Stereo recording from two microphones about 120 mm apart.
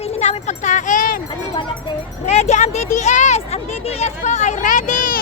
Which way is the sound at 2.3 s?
70° left (ahead or behind).